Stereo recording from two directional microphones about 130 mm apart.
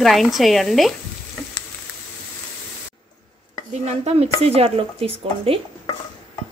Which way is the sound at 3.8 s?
50° right (ahead or behind).